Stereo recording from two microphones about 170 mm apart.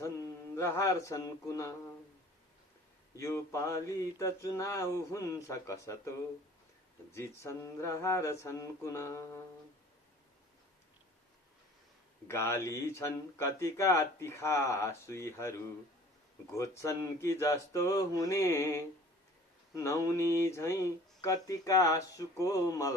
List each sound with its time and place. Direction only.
0.0 s mantra: 15° left (ahead or behind)
3.2 s speech: 15° left (ahead or behind)
7.1 s speech: 15° left (ahead or behind)
12.3 s speech: 15° left (ahead or behind)
16.6 s speech: 20° left (ahead or behind)